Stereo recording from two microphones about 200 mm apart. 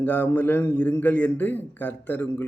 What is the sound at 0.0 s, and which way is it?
Speech, 10° left (ahead or behind).